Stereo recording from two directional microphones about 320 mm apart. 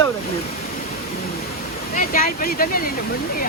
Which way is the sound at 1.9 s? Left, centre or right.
Left.